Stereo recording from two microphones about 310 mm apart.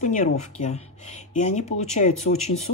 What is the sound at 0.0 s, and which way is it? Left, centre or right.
Speech, left.